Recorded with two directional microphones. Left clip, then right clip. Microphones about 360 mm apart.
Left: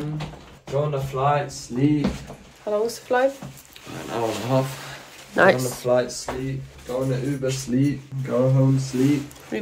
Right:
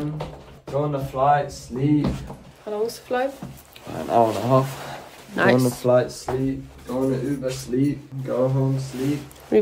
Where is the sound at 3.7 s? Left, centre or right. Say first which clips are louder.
Right 10 dB; centre.